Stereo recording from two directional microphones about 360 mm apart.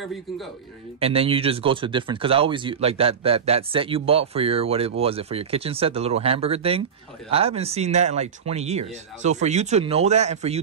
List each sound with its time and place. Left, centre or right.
0.9 s speech: centre